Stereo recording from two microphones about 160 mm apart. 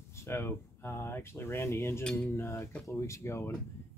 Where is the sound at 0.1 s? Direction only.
15° left (ahead or behind).